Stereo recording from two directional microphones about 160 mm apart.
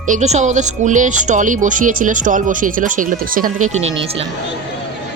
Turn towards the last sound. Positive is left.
turn(degrees=-60)  # may be behind; listen again after turning